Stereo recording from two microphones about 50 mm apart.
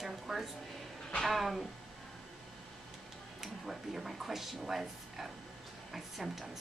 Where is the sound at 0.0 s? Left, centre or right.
Centre.